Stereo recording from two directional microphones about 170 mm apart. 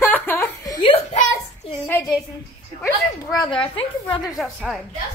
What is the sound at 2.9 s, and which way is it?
Speech, 25° left (ahead or behind).